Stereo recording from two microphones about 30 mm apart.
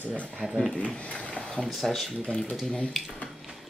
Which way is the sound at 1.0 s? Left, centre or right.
Left.